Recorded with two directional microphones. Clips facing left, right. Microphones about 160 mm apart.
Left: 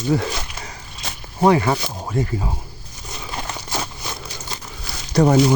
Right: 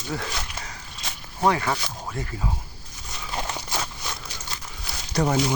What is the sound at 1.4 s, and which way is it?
Speech, 20° left (ahead or behind).